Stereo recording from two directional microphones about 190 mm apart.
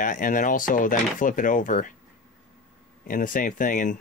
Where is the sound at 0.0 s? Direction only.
45° left (ahead or behind).